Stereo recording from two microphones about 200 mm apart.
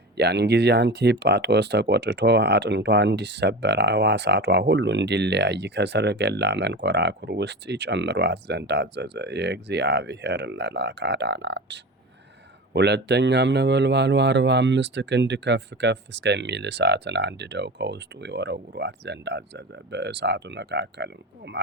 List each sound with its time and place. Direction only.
0.2 s speech: 55° right (ahead or behind)